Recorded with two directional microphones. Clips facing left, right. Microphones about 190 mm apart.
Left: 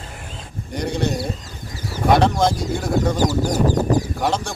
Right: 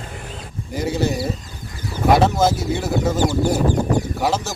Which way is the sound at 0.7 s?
5° right (ahead or behind).